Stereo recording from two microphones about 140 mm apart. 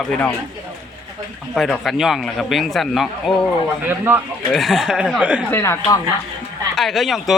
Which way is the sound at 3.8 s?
15° right (ahead or behind).